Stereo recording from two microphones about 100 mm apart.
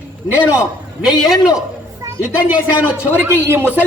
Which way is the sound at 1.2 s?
Centre (ahead or behind).